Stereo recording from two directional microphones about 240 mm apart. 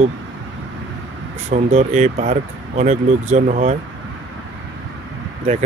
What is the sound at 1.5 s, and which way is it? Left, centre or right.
Speech, right.